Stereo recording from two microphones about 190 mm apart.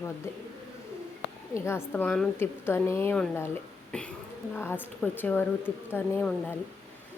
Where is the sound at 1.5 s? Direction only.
15° left (ahead or behind).